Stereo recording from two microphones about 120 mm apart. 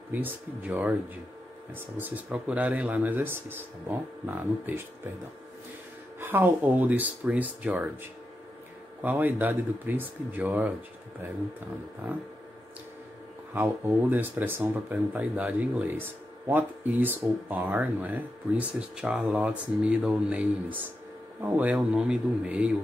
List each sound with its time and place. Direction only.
0.1 s speech: 15° right (ahead or behind)
2.0 s speech: 15° right (ahead or behind)
6.1 s speech: 20° right (ahead or behind)
9.0 s speech: 15° right (ahead or behind)
13.6 s speech: 15° right (ahead or behind)